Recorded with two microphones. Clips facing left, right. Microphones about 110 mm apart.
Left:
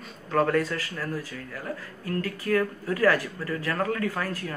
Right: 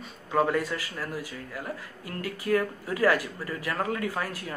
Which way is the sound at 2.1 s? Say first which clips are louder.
Left 1 dB; 15° right (ahead or behind).